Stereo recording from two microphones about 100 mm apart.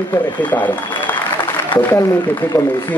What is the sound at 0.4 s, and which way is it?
Speech, 15° left (ahead or behind).